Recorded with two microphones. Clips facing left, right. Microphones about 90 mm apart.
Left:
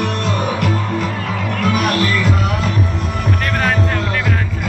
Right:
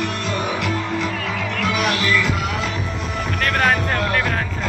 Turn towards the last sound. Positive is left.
turn(degrees=0)  # may be behind; listen again after turning